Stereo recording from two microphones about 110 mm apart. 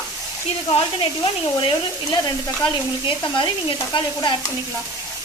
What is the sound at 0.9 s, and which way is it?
Stir, 50° left (ahead or behind).